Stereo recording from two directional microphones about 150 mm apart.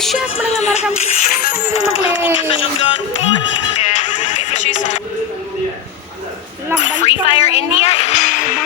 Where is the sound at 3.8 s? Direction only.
50° left (ahead or behind).